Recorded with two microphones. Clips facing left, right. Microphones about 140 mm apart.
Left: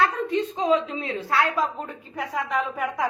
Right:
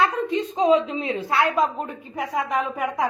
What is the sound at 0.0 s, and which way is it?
A woman's voice, 20° right (ahead or behind).